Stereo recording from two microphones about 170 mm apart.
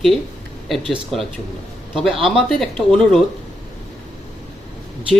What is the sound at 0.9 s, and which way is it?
Speech, centre (ahead or behind).